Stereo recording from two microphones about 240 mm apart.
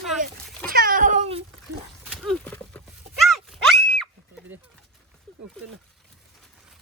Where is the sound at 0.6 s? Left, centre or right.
Right.